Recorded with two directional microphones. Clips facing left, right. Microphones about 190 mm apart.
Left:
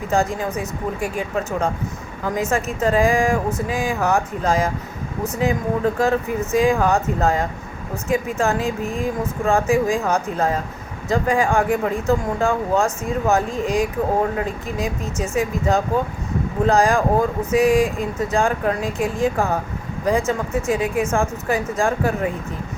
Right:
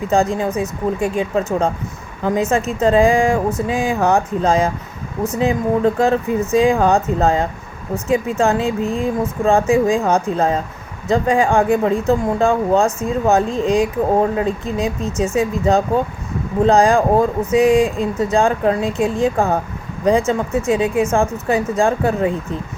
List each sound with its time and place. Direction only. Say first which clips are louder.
0.1 s speech: right 4 dB; 25° right (ahead or behind)